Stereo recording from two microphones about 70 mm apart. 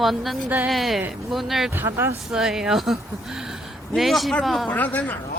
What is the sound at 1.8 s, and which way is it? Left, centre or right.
Speech, right.